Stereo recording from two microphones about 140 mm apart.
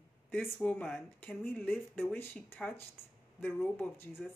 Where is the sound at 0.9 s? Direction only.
15° left (ahead or behind).